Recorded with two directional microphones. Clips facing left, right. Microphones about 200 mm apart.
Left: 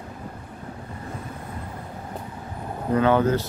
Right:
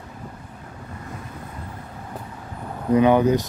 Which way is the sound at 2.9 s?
15° right (ahead or behind).